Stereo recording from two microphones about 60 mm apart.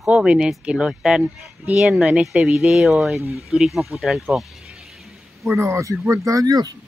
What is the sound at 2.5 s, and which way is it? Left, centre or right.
Speech, centre.